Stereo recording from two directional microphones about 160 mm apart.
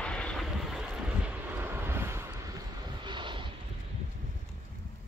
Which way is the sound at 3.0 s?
30° right (ahead or behind).